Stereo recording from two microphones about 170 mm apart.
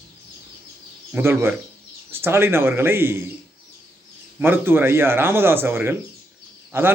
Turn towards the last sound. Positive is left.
turn(degrees=-15)  # may be behind; listen again after turning